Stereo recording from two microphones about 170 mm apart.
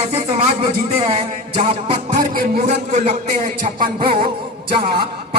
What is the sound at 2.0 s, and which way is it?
A man's voice, 55° right (ahead or behind).